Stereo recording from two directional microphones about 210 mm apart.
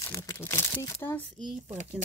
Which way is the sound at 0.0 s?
15° left (ahead or behind).